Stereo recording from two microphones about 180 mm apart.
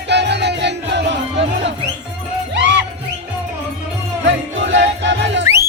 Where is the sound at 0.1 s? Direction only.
70° right (ahead or behind).